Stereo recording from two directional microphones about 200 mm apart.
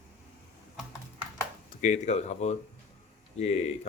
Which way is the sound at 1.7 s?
35° left (ahead or behind).